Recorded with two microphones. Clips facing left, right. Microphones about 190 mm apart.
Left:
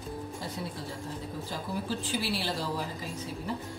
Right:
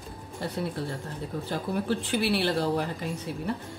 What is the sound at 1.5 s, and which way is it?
A woman's voice, 60° right (ahead or behind).